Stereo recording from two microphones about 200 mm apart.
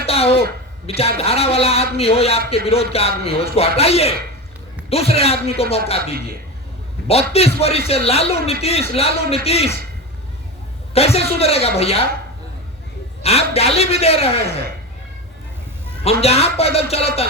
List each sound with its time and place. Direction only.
0.0 s a sound: 30° left (ahead or behind)
0.9 s a man's voice: 30° left (ahead or behind)
7.1 s a man's voice: 30° left (ahead or behind)
10.9 s a man's voice: 30° left (ahead or behind)
13.2 s a man's voice: 30° left (ahead or behind)
16.2 s a man's voice: 30° left (ahead or behind)